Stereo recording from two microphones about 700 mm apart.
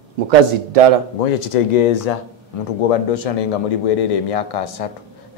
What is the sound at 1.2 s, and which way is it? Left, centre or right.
Speech, left.